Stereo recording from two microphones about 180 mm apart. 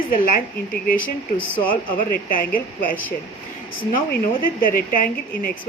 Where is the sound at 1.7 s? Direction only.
50° left (ahead or behind).